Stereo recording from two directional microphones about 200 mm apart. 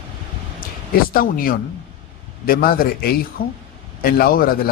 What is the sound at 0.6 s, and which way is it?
Speech, 45° left (ahead or behind).